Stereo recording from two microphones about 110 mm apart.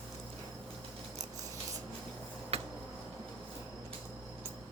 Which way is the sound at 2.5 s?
65° right (ahead or behind).